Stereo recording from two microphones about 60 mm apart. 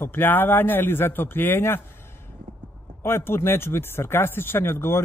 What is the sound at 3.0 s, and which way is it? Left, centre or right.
Speech, left.